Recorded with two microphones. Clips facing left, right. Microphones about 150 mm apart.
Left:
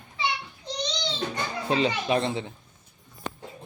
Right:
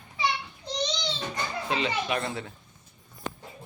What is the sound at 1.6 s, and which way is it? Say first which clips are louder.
Speech: left 5 dB; 35° left (ahead or behind).